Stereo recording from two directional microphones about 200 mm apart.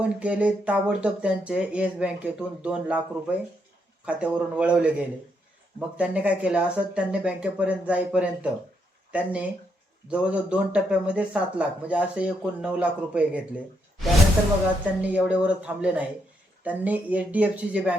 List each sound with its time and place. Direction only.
0.0 s speech: 5° right (ahead or behind)
15.0 s speech: 5° right (ahead or behind)